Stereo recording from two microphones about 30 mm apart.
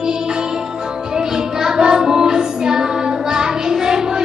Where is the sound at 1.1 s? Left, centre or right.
Right.